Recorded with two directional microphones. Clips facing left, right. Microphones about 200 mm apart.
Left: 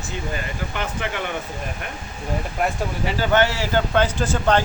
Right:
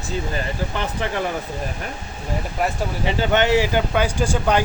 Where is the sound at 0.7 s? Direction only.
35° right (ahead or behind).